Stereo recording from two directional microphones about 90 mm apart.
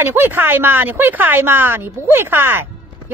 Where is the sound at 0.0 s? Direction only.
25° right (ahead or behind).